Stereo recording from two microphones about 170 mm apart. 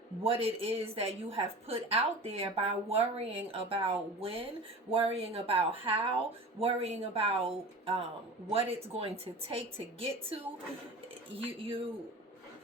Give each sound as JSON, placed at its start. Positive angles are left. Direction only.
{"t": 0.2, "sound": "a woman's voice", "side_deg": -35}